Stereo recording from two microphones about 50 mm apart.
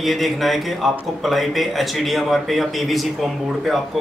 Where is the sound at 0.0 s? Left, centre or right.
Centre.